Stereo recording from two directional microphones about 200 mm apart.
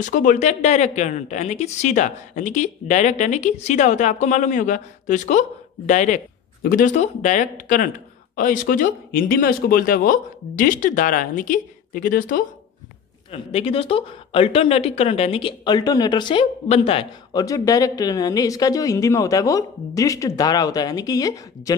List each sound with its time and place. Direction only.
0.0 s speech: 40° left (ahead or behind)
13.3 s speech: 30° left (ahead or behind)